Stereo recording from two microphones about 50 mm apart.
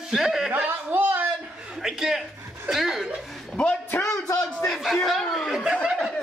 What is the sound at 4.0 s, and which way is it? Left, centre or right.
Speech, left.